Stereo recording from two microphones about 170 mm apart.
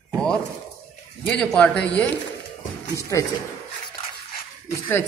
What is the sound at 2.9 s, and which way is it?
Speech, 20° left (ahead or behind).